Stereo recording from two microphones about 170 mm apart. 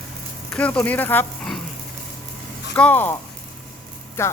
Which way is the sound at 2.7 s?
10° left (ahead or behind).